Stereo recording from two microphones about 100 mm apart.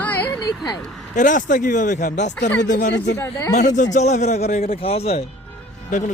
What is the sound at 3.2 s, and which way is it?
Speech, 30° left (ahead or behind).